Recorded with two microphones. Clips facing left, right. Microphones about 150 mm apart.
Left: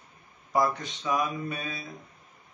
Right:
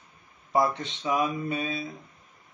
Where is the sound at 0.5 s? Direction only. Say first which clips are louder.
Right 1 dB; 25° right (ahead or behind).